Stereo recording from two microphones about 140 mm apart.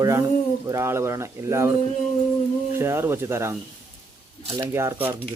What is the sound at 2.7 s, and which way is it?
Speech, 15° right (ahead or behind).